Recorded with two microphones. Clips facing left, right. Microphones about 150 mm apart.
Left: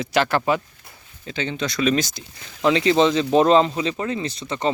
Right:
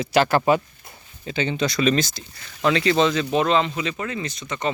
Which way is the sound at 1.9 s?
15° left (ahead or behind).